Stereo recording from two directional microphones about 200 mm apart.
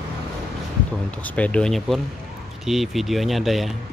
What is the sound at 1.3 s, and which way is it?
Speech, 5° left (ahead or behind).